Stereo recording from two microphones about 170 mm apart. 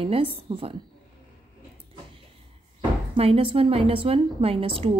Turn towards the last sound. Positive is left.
turn(degrees=-35)  # may be behind; listen again after turning